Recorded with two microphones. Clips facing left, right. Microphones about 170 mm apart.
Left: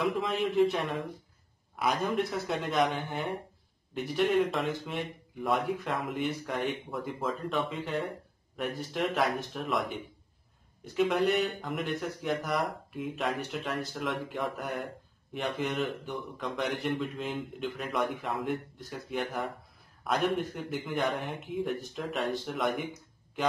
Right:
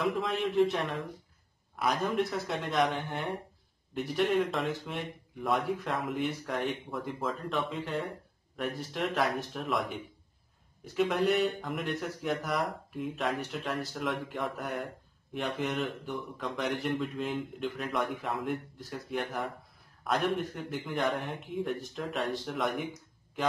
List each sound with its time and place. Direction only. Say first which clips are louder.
0.0 s speech: left 1 dB; centre (ahead or behind)